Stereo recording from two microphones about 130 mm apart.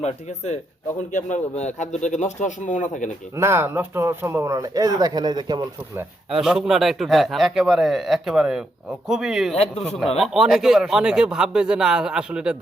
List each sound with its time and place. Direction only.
0.0 s speech: 60° left (ahead or behind)
3.3 s speech: 20° right (ahead or behind)
6.3 s a man's voice: 5° right (ahead or behind)
9.6 s a man's voice: 55° left (ahead or behind)
10.2 s a man's voice: 5° right (ahead or behind)